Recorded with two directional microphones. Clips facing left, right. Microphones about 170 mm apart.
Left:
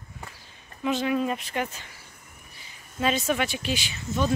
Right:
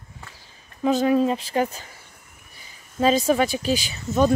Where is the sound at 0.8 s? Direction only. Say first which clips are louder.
Right 6 dB; 35° right (ahead or behind).